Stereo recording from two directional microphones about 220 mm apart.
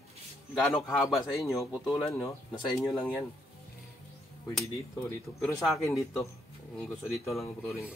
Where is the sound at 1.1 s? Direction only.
Centre (ahead or behind).